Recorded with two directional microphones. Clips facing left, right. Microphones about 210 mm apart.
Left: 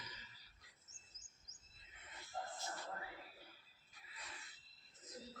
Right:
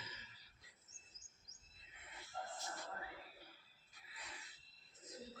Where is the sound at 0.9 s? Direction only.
60° right (ahead or behind).